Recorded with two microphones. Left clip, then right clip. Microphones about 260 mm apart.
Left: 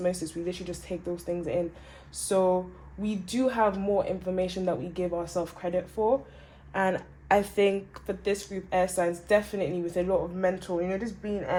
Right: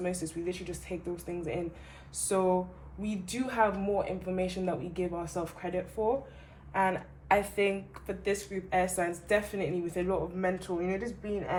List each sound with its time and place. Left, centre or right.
0.0 s speech: left